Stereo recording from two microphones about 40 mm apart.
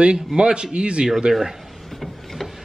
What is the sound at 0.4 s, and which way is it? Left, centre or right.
A man's voice, right.